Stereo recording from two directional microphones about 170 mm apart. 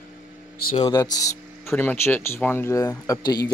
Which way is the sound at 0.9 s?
20° left (ahead or behind).